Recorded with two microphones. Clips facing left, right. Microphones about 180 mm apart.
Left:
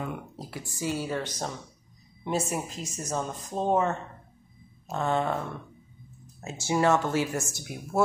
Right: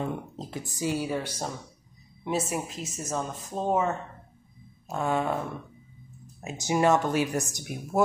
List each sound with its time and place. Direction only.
0.0 s speech: 25° right (ahead or behind); by 5.4 s 5° right (ahead or behind)
6.4 s speech: 15° right (ahead or behind)
7.7 s speech: 20° left (ahead or behind)